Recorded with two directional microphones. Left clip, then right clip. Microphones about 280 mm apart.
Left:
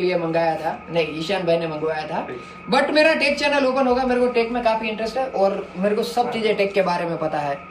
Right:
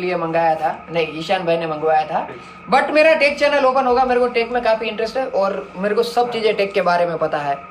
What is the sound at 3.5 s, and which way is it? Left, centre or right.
Speech, right.